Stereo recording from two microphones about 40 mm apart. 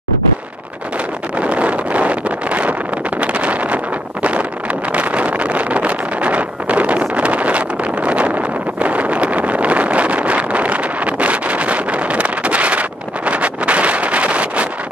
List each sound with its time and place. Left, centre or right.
1.4 s vehicle: right
3.2 s wind noise: right
4.9 s vehicle: right